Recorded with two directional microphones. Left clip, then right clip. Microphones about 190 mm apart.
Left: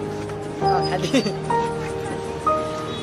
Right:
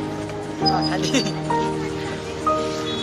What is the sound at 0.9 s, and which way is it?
Speech, 50° left (ahead or behind).